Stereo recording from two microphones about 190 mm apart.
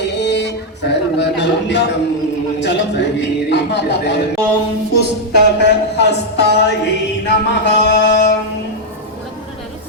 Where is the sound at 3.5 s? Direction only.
65° left (ahead or behind).